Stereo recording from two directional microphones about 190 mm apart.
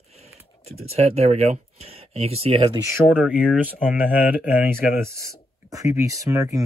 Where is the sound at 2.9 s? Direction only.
5° right (ahead or behind).